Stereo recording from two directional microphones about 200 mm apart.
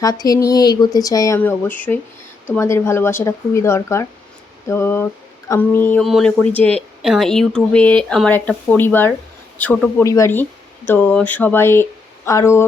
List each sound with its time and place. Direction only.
0.0 s speech: 20° left (ahead or behind)